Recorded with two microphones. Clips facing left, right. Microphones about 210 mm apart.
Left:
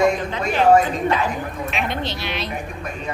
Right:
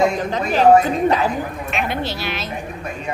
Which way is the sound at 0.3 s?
40° right (ahead or behind).